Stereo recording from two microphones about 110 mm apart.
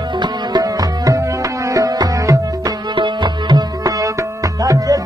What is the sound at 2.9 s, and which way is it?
Tabla, 45° right (ahead or behind).